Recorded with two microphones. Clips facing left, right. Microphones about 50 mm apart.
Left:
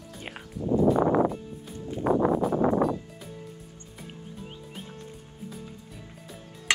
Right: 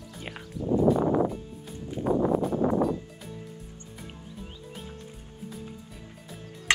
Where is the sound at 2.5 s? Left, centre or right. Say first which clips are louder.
Left 1 dB; left.